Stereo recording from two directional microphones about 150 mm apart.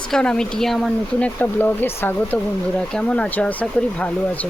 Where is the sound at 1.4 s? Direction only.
10° left (ahead or behind).